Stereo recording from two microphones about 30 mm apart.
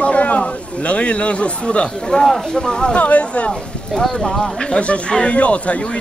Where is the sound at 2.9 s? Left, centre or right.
Left.